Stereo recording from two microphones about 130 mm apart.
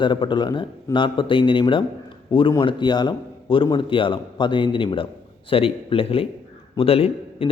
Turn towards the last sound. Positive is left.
turn(degrees=50)  # may be behind; listen again after turning